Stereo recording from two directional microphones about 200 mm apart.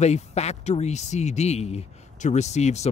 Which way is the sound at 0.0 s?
35° left (ahead or behind).